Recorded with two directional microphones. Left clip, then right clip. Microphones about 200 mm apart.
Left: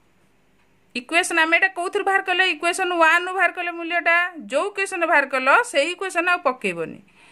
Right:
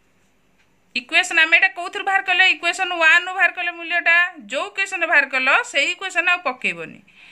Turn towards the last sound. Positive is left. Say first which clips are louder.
# right 1 dB
turn(degrees=45)  # may be behind; listen again after turning